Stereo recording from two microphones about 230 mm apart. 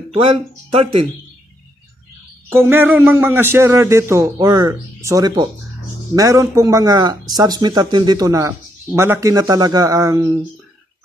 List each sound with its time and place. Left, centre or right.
0.1 s speech: right
2.5 s a man's voice: centre